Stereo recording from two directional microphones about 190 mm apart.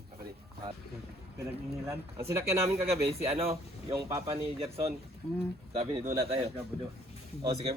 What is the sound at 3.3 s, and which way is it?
Speech, 30° right (ahead or behind).